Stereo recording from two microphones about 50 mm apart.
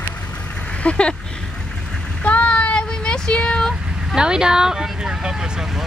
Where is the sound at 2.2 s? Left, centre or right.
Left.